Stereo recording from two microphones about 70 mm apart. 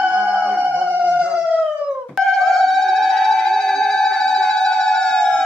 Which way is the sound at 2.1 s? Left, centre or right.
Centre.